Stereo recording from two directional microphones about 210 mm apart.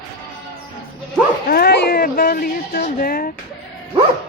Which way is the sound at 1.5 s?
50° left (ahead or behind).